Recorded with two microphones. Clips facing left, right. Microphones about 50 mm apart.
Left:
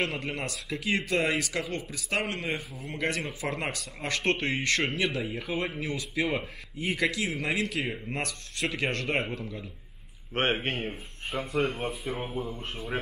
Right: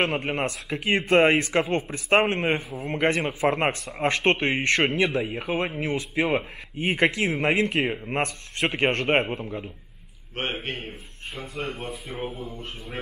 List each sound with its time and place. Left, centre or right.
0.0 s a man's voice: right
10.3 s a man's voice: left